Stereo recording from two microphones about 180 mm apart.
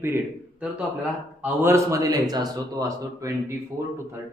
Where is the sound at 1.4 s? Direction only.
15° right (ahead or behind).